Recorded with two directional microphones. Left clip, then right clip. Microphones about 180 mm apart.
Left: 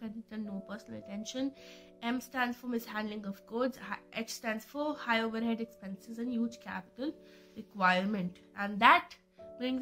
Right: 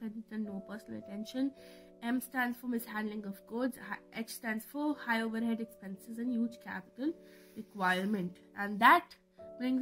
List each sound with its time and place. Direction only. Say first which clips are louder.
0.0 s a woman's voice: right 1 dB; 45° right (ahead or behind)